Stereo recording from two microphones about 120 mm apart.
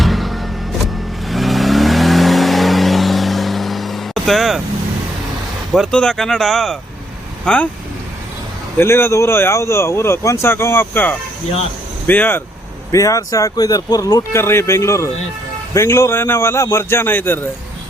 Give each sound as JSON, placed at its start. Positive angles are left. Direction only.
{"t": 0.0, "sound": "vehicle", "side_deg": 0}
{"t": 5.7, "sound": "speech", "side_deg": 0}
{"t": 8.8, "sound": "speech", "side_deg": 20}
{"t": 12.9, "sound": "speech", "side_deg": 30}